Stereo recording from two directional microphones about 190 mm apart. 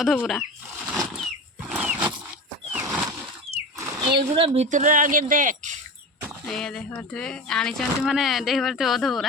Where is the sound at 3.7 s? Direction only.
15° right (ahead or behind).